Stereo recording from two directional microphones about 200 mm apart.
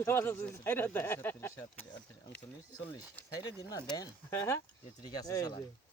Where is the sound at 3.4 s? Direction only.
20° left (ahead or behind).